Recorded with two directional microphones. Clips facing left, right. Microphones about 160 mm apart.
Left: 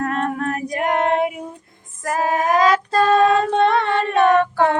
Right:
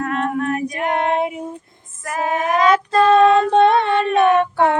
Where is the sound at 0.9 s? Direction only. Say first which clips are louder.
Left 1 dB; 20° right (ahead or behind).